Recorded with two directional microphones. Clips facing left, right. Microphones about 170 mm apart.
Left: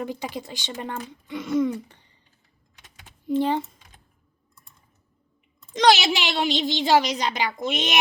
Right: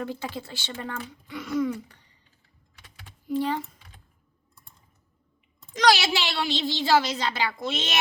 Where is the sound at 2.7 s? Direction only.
20° left (ahead or behind).